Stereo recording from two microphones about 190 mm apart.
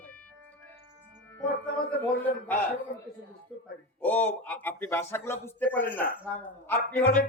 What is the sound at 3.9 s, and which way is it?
A man's voice, 10° left (ahead or behind).